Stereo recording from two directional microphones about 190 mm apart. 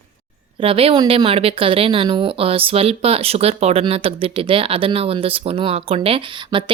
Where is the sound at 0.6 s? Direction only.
30° right (ahead or behind).